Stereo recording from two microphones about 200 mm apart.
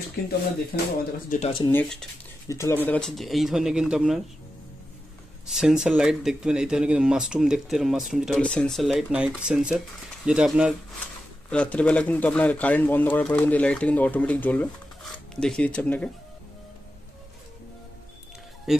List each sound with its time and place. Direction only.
0.2 s speech: 50° left (ahead or behind)
1.7 s speech: 5° left (ahead or behind)
5.5 s speech: centre (ahead or behind)
18.7 s speech: centre (ahead or behind)